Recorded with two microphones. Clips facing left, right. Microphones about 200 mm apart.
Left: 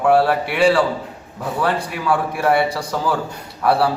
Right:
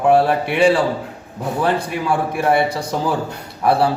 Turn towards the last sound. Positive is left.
turn(degrees=-20)  # may be behind; listen again after turning